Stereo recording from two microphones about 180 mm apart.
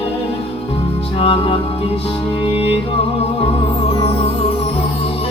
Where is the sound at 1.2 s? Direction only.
30° left (ahead or behind).